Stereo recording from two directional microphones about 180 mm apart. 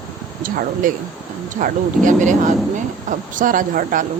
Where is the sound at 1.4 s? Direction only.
45° right (ahead or behind).